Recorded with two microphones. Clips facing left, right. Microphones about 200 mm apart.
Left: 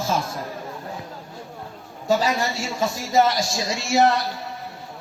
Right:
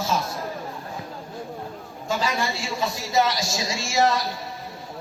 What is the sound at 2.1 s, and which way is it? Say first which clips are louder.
A woman's voice: left 4 dB; 40° left (ahead or behind).